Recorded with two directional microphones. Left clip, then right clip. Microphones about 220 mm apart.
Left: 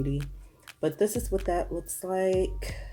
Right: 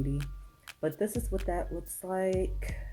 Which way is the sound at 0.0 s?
Centre (ahead or behind).